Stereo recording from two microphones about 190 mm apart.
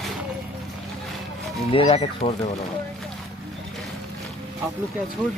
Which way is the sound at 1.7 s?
30° left (ahead or behind).